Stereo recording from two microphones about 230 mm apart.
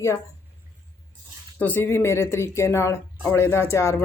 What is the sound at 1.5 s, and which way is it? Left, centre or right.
Speech, centre.